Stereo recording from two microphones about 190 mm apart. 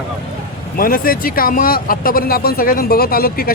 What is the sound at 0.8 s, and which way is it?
Speech, 50° left (ahead or behind).